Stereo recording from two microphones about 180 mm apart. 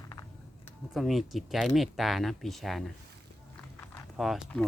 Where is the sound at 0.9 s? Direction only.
Centre (ahead or behind).